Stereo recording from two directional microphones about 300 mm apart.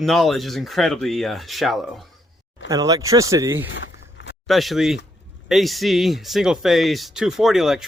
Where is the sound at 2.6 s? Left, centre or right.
Centre.